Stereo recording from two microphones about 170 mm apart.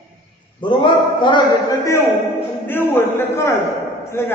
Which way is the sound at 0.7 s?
30° left (ahead or behind).